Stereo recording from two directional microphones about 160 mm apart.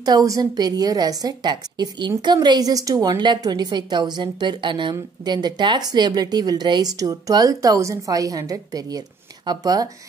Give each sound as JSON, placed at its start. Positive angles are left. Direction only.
{"t": 0.0, "sound": "a woman's voice", "side_deg": -25}